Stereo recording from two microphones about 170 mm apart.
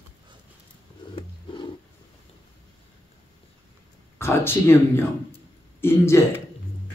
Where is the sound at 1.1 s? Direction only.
30° left (ahead or behind).